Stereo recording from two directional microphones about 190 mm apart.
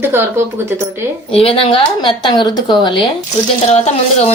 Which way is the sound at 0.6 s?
15° right (ahead or behind).